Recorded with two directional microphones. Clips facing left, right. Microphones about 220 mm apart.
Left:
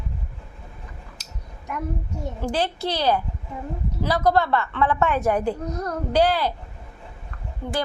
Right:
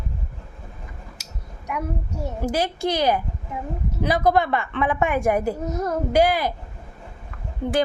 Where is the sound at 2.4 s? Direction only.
10° right (ahead or behind).